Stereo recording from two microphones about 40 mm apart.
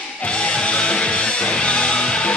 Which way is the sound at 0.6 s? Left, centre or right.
Left.